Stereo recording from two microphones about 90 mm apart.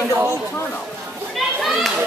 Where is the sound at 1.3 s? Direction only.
Centre (ahead or behind).